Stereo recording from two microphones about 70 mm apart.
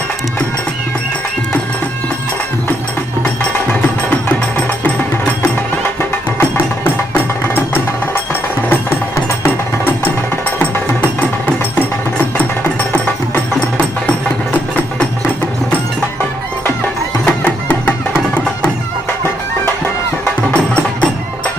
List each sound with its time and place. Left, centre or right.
3.8 s music: left
6.5 s music: left
17.2 s music: left
20.2 s music: centre